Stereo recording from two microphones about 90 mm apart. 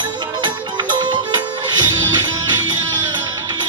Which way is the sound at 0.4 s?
60° right (ahead or behind).